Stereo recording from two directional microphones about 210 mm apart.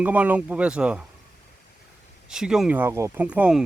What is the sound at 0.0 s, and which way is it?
Speech, 5° right (ahead or behind).